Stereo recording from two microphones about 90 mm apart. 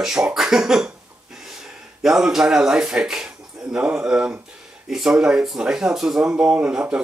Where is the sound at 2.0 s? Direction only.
5° right (ahead or behind).